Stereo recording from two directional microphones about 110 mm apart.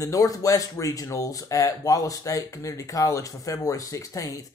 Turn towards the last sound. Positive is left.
turn(degrees=30)  # may be behind; listen again after turning